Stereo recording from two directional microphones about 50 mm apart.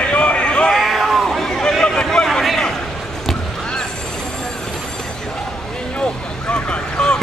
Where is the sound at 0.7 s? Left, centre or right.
Centre.